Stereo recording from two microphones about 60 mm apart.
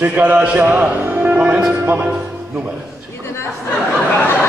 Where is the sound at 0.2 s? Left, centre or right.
Right.